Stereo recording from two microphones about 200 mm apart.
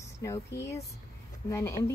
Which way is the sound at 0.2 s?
15° left (ahead or behind).